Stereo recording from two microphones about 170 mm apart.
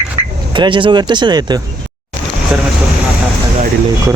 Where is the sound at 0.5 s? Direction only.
30° right (ahead or behind).